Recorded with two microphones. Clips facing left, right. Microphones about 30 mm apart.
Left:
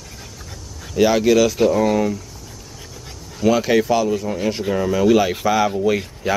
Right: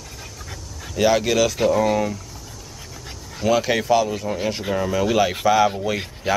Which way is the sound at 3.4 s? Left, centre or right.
Centre.